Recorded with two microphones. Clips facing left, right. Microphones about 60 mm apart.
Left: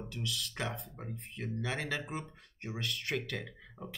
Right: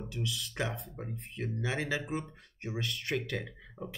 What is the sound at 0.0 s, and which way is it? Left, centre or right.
Speech, centre.